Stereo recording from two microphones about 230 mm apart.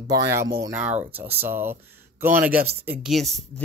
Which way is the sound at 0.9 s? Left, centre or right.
Right.